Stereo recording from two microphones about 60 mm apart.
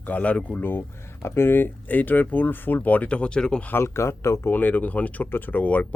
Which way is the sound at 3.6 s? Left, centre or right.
Left.